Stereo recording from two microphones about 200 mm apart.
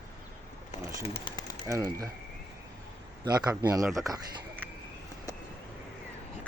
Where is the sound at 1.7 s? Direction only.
15° right (ahead or behind).